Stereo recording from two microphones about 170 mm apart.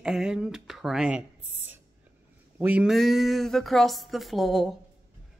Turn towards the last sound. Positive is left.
turn(degrees=0)  # may be behind; listen again after turning